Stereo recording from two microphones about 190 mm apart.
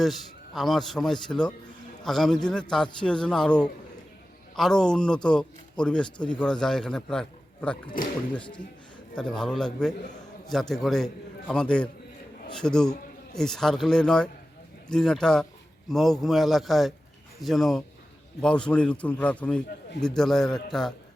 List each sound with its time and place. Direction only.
0.0 s a man's voice: centre (ahead or behind)
8.4 s speech: 25° left (ahead or behind)
9.1 s a man's voice: 5° left (ahead or behind)